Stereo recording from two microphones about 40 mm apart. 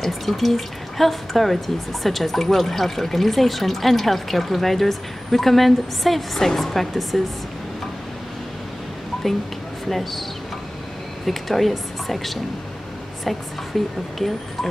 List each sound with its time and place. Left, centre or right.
0.0 s speech: centre
9.8 s speech: centre
11.2 s speech: centre
13.7 s speech: centre